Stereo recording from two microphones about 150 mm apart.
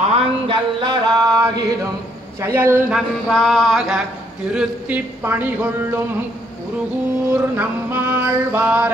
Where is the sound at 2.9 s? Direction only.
Centre (ahead or behind).